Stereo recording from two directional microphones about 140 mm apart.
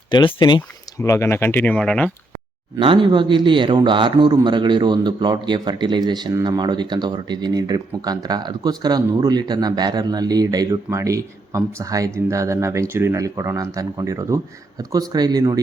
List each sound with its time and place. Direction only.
0.1 s speech: 35° left (ahead or behind); by 2.1 s 5° left (ahead or behind)
2.7 s a man's voice: 35° right (ahead or behind)